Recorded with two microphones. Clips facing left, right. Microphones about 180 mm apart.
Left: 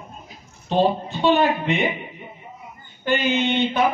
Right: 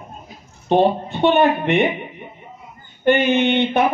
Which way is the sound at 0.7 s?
60° right (ahead or behind).